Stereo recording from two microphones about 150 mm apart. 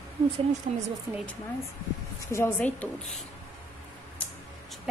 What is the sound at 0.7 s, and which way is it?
Speech, 45° right (ahead or behind).